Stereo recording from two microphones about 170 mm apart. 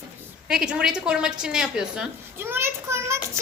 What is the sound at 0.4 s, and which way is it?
A woman's voice, 5° right (ahead or behind).